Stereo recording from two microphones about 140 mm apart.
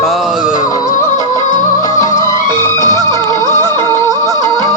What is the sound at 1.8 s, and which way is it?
Music, 25° left (ahead or behind).